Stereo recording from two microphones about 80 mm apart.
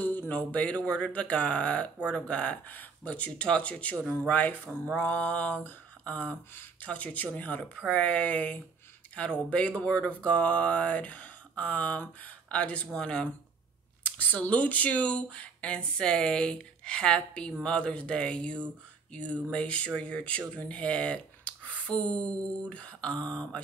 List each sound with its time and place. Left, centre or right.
0.0 s speech: left